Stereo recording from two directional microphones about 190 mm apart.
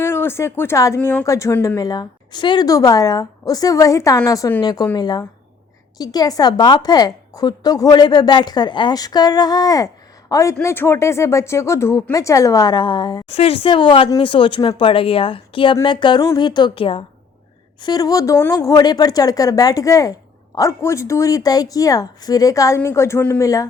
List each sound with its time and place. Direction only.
0.0 s a woman's voice: 15° left (ahead or behind)